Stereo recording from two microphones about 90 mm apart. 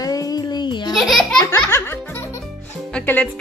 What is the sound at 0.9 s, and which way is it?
Speech, centre (ahead or behind).